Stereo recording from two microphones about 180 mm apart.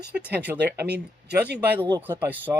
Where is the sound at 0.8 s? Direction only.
70° right (ahead or behind).